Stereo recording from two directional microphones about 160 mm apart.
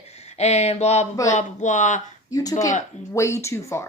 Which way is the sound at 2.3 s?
20° left (ahead or behind).